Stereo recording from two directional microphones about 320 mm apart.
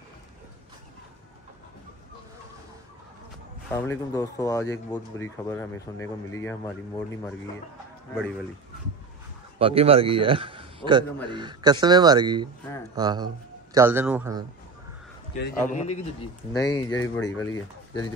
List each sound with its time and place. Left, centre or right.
3.7 s speech: centre
9.6 s a man's voice: centre
15.7 s a man's voice: left
16.5 s speech: centre